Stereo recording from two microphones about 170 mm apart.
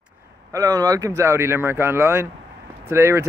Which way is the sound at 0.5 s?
20° right (ahead or behind).